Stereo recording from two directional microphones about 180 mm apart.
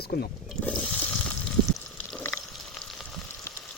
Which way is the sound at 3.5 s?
15° left (ahead or behind).